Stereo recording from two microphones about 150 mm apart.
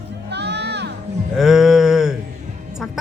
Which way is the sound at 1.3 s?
5° right (ahead or behind).